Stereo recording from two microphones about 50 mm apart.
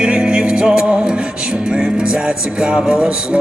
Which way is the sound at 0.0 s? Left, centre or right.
Centre.